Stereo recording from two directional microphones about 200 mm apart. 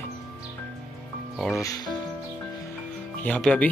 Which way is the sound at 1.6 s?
15° left (ahead or behind).